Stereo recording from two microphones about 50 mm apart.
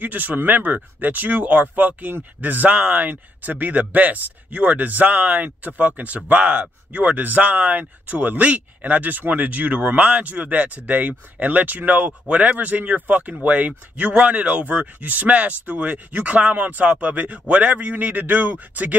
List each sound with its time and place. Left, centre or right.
0.0 s speech: right